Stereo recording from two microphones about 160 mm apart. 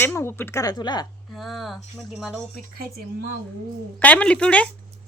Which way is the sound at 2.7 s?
75° right (ahead or behind).